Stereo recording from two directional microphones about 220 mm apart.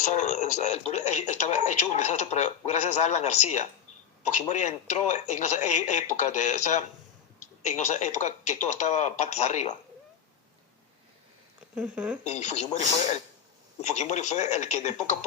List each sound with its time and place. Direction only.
0.0 s speech: 35° left (ahead or behind)
11.7 s speech: 5° right (ahead or behind)
12.2 s speech: 30° left (ahead or behind)
13.8 s speech: 30° left (ahead or behind)